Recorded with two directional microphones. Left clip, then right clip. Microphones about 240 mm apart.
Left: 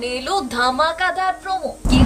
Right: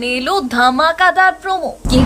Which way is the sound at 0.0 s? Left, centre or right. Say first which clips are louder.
Right 5 dB; centre.